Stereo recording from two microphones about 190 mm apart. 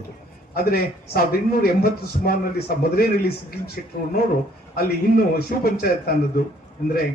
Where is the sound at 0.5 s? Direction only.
55° left (ahead or behind).